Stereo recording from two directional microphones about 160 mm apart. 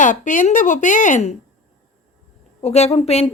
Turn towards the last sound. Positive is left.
turn(degrees=40)  # may be behind; listen again after turning